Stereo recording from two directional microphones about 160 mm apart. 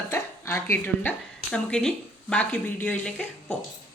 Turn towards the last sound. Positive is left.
turn(degrees=10)  # may be behind; listen again after turning